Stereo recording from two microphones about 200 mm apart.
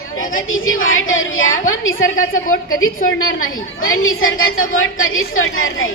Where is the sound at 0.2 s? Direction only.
85° left.